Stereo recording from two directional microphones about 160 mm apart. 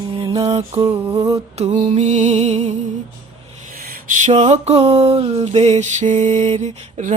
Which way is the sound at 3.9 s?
50° right (ahead or behind).